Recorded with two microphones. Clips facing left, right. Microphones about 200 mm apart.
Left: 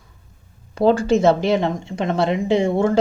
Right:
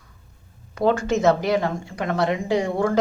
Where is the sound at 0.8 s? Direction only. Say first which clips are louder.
Left 5 dB; 30° left (ahead or behind).